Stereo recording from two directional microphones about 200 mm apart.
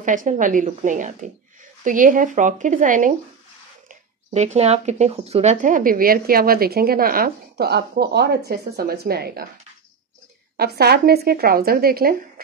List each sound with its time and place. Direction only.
0.0 s speech: 40° right (ahead or behind)
10.6 s speech: 55° right (ahead or behind)